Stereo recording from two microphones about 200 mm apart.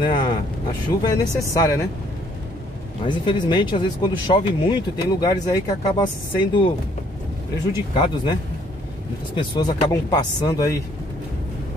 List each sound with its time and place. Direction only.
0.0 s speech: 25° left (ahead or behind)
3.1 s speech: 25° left (ahead or behind)
7.7 s speech: 20° left (ahead or behind)
9.4 s speech: 20° left (ahead or behind)